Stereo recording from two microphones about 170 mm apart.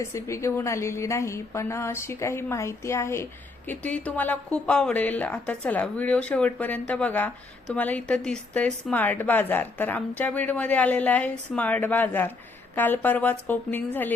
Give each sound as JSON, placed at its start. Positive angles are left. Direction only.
{"t": 0.0, "sound": "a woman's voice", "side_deg": 15}